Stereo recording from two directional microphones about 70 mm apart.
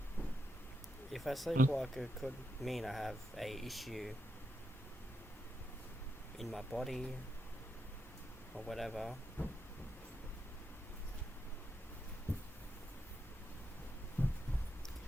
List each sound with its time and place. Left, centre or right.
1.1 s speech: centre
6.4 s speech: centre
8.5 s speech: centre
9.4 s train: left
14.2 s heart sounds: left